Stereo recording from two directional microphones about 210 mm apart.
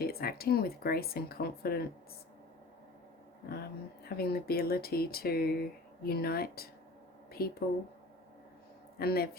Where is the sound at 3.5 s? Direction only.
45° left (ahead or behind).